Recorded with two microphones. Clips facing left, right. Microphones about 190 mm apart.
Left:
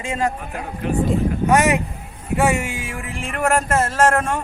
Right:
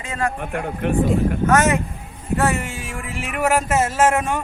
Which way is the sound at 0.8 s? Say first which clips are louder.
Right 1 dB; 65° right (ahead or behind).